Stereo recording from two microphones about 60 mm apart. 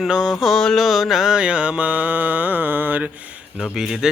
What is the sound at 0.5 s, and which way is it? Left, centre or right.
Mantra, centre.